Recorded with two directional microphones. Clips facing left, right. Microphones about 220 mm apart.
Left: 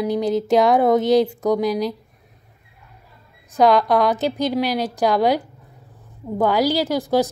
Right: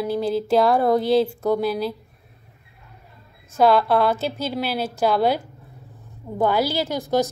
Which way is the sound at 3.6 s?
15° left (ahead or behind).